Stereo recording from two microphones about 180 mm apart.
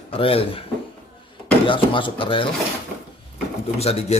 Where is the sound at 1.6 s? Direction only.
30° left (ahead or behind).